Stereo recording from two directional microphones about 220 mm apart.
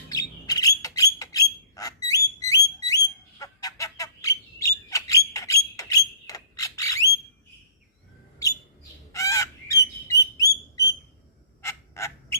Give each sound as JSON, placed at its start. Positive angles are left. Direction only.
{"t": 0.1, "sound": "bird", "side_deg": 15}
{"t": 9.1, "sound": "bird", "side_deg": 15}
{"t": 11.6, "sound": "owl", "side_deg": 10}